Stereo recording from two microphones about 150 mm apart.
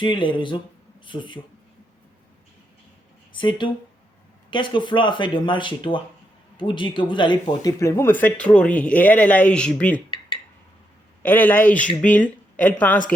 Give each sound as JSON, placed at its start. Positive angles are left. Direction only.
{"t": 0.0, "sound": "speech", "side_deg": 35}
{"t": 3.3, "sound": "speech", "side_deg": 35}
{"t": 7.6, "sound": "speech", "side_deg": 20}
{"t": 11.2, "sound": "speech", "side_deg": 10}